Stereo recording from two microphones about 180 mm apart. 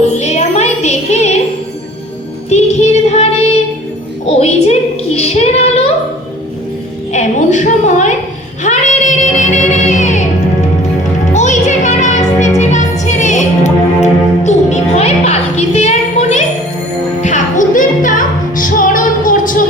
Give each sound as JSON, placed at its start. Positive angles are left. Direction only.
{"t": 0.2, "sound": "a sound", "side_deg": 40}
{"t": 2.5, "sound": "music", "side_deg": 40}
{"t": 4.3, "sound": "a woman's voice", "side_deg": 35}
{"t": 7.1, "sound": "a sound", "side_deg": 40}
{"t": 8.6, "sound": "child singing", "side_deg": 40}
{"t": 9.7, "sound": "music", "side_deg": 40}
{"t": 11.3, "sound": "music", "side_deg": 40}